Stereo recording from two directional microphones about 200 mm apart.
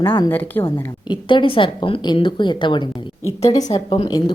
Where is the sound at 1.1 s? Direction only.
25° left (ahead or behind).